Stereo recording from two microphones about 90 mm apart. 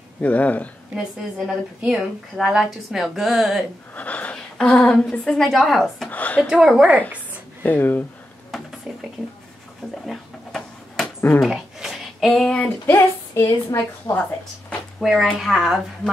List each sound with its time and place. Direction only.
0.2 s speech: 15° left (ahead or behind)
1.8 s a woman's voice: 10° right (ahead or behind)
3.9 s a sound: 15° left (ahead or behind)
4.6 s a woman's voice: 5° left (ahead or behind)
6.0 s speech: 15° left (ahead or behind)
6.5 s a woman's voice: 5° right (ahead or behind)
7.6 s speech: 20° left (ahead or behind)
8.9 s a woman's voice: 10° right (ahead or behind)
10.0 s a sound: 5° left (ahead or behind)
12.3 s speech: 10° left (ahead or behind)
12.9 s a woman's voice: 30° left (ahead or behind)
15.0 s a woman's voice: 5° right (ahead or behind)